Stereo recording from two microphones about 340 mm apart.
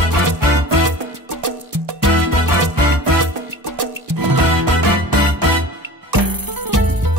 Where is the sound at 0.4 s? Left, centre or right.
Right.